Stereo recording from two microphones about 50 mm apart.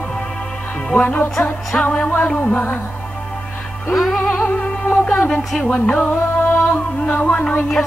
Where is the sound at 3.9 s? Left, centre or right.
Centre.